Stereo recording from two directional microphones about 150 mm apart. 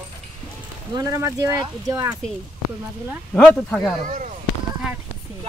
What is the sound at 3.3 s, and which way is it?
Speech, 5° left (ahead or behind).